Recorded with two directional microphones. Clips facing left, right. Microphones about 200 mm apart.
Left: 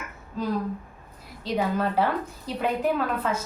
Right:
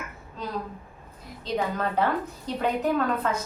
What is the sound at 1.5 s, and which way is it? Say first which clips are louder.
Speech: left 2 dB; 5° left (ahead or behind).